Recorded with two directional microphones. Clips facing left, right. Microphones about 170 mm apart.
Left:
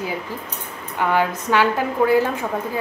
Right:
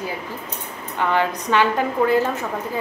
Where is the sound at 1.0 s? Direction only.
10° left (ahead or behind).